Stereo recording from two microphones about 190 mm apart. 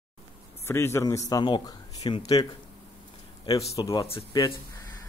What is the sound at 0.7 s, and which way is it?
Speech, 15° left (ahead or behind).